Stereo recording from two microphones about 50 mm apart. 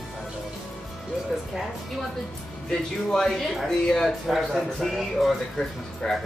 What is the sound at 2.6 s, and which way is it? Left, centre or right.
Speech, centre.